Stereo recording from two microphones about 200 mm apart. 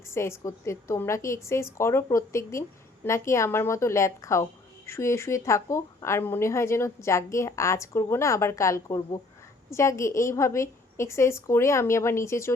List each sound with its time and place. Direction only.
0.1 s a woman's voice: 15° left (ahead or behind)